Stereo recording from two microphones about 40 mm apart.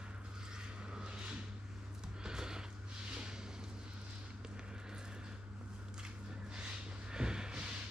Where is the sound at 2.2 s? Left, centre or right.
Centre.